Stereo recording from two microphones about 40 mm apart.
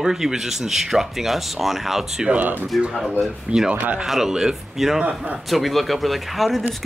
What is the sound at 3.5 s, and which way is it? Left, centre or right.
Speech, right.